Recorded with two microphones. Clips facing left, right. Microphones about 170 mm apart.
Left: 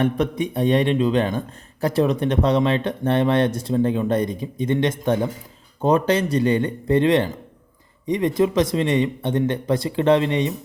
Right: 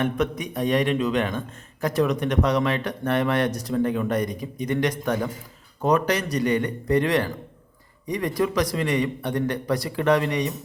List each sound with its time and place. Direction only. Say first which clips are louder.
0.0 s a man's voice: left 4 dB; 30° left (ahead or behind)